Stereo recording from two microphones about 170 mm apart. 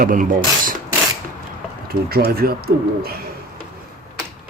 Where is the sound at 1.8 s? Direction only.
65° right (ahead or behind).